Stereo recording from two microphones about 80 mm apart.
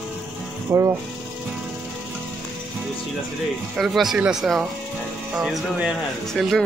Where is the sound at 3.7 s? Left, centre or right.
Centre.